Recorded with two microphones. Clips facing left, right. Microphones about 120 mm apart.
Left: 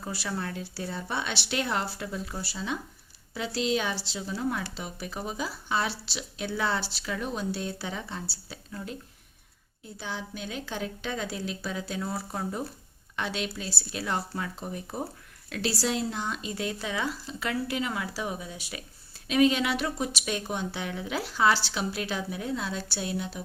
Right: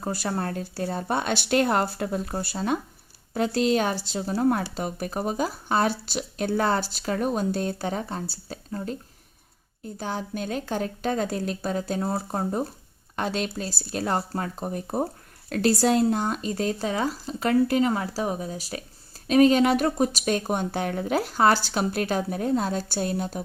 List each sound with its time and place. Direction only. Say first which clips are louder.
0.0 s speech: right 6 dB; 45° right (ahead or behind)